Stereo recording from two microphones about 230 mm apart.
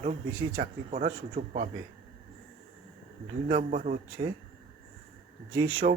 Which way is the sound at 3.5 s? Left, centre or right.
Right.